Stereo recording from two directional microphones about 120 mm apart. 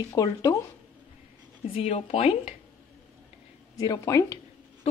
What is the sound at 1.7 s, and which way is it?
Speech, 55° left (ahead or behind).